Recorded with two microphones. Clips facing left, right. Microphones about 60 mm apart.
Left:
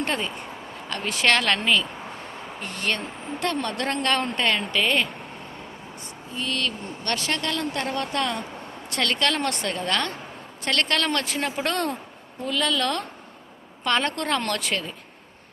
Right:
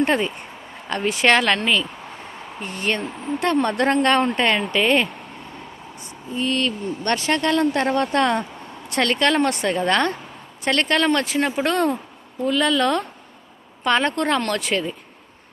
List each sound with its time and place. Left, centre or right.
0.0 s a woman's voice: right
1.5 s speech: centre
2.6 s speech: centre
6.3 s speech: right
8.9 s a woman's voice: right; by 14.9 s centre